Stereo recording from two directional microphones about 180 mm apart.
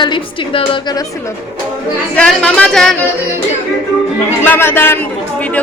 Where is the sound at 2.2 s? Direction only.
5° left (ahead or behind).